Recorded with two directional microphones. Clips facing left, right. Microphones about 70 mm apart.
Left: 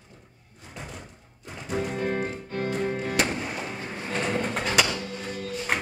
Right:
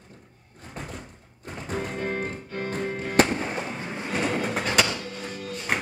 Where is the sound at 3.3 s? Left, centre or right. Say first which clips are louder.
Right 3 dB; right.